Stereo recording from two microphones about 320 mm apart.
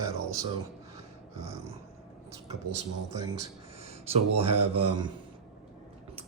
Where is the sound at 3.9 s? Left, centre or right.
Centre.